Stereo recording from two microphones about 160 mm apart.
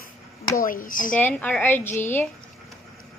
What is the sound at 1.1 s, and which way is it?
A woman's voice, 10° left (ahead or behind).